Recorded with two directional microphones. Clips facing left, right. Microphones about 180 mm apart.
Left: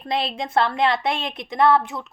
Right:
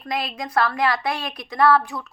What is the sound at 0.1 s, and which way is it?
A woman's voice, 30° left (ahead or behind).